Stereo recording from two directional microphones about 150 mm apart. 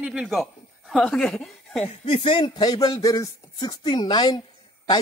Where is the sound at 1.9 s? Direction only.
40° left (ahead or behind).